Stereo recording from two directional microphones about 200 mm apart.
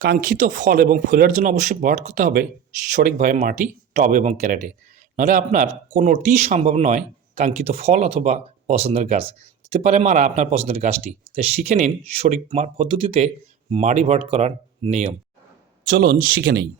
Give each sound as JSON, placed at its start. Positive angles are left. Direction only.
{"t": 0.0, "sound": "speech", "side_deg": -45}
{"t": 15.9, "sound": "speech", "side_deg": -45}